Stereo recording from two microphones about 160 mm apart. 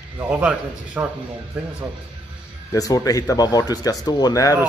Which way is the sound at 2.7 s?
20° left (ahead or behind).